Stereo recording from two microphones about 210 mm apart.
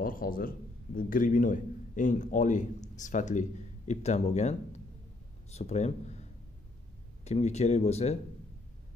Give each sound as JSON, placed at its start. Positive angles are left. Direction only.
{"t": 0.0, "sound": "a man's voice", "side_deg": 45}
{"t": 7.2, "sound": "a man's voice", "side_deg": 30}